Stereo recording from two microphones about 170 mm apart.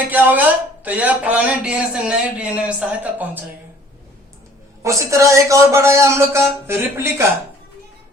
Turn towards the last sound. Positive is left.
turn(degrees=-15)  # may be behind; listen again after turning